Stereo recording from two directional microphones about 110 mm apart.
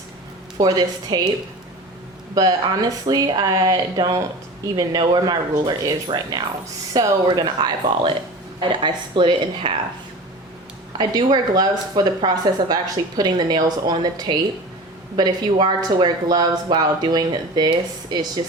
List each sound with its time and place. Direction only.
0.6 s speech: 35° right (ahead or behind)
2.3 s speech: 35° right (ahead or behind)
10.9 s speech: 40° right (ahead or behind)